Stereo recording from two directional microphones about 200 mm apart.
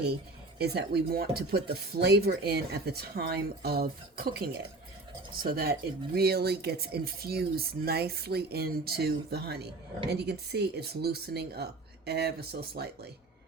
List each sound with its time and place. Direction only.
0.6 s speech: 55° right (ahead or behind)